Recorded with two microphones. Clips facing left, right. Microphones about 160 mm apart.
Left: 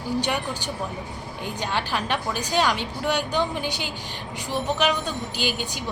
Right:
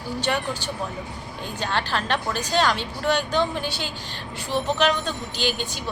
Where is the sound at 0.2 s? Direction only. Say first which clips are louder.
Right 1 dB; 15° left (ahead or behind).